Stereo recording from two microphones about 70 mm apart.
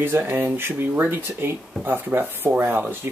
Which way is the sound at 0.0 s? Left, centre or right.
Right.